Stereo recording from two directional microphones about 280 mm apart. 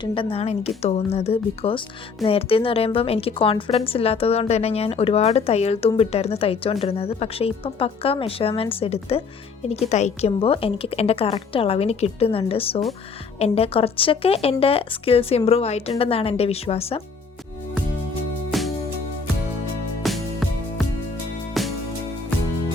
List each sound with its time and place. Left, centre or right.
0.0 s a woman's voice: centre
18.5 s music: centre
20.0 s music: centre